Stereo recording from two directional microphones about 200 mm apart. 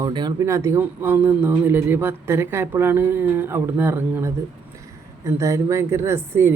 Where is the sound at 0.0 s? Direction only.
20° right (ahead or behind).